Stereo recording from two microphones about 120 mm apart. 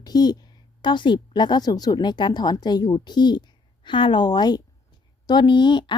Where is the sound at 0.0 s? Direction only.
35° left (ahead or behind).